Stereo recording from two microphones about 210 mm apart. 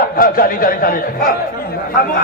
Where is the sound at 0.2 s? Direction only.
40° left (ahead or behind).